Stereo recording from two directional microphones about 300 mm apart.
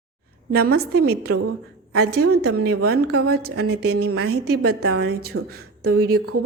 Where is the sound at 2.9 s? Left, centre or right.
Right.